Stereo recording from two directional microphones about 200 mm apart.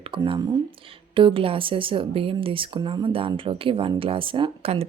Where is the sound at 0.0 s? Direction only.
25° right (ahead or behind).